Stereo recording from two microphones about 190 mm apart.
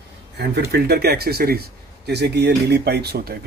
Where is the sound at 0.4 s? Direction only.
60° right (ahead or behind).